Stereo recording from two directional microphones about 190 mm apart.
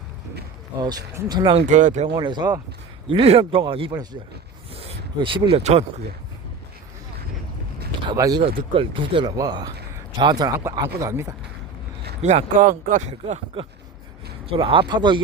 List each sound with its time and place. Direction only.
0.8 s speech: 20° right (ahead or behind)
1.7 s speech: 40° right (ahead or behind)
2.1 s speech: 20° right (ahead or behind)
5.2 s speech: 30° right (ahead or behind)
8.0 s speech: 20° right (ahead or behind)
12.2 s speech: 35° right (ahead or behind)